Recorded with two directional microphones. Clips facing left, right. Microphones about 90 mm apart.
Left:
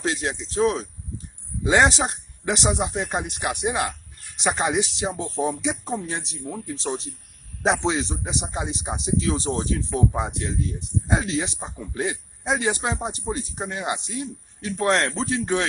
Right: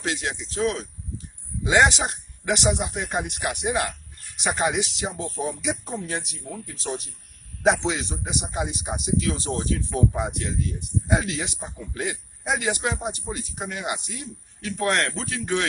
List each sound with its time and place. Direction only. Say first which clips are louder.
0.0 s speech: left 2 dB; 35° left (ahead or behind)